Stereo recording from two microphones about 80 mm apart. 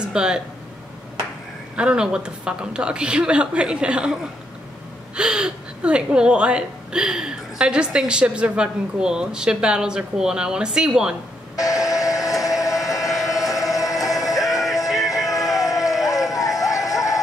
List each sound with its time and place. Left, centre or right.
0.0 s speech: centre
1.8 s a woman's voice: centre
11.5 s a sound: left
13.1 s vehicle: centre
13.5 s a sound: left
14.4 s music: centre
15.0 s music: left